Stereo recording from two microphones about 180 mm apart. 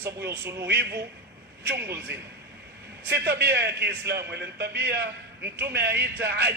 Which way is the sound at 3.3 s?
70° right (ahead or behind).